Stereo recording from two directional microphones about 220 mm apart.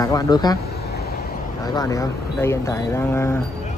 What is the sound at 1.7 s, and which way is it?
Speech, 15° left (ahead or behind).